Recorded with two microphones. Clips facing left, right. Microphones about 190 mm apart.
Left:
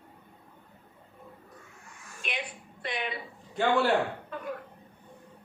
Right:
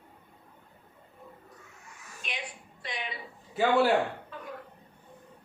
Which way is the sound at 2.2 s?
60° left (ahead or behind).